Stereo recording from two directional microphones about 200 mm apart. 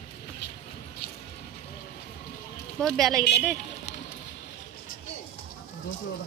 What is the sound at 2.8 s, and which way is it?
Speech, centre (ahead or behind).